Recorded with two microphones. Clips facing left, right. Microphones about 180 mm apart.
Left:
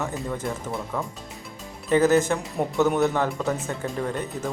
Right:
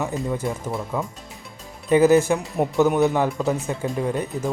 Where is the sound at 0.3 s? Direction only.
20° right (ahead or behind).